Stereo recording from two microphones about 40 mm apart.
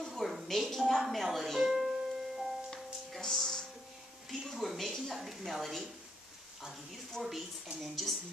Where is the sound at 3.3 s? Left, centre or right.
Centre.